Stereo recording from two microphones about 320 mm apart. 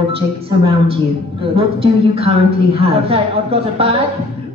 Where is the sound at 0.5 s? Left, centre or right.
Centre.